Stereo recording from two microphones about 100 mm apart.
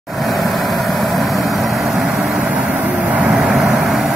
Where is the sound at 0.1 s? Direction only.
Centre (ahead or behind); by 3.3 s 15° right (ahead or behind).